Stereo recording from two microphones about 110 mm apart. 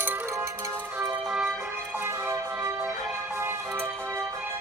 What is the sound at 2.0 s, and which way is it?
Music, 25° right (ahead or behind).